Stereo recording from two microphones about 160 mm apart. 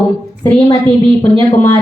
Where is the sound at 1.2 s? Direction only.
20° left (ahead or behind).